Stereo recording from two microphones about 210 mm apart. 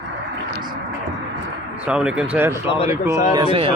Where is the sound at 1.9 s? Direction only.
5° right (ahead or behind).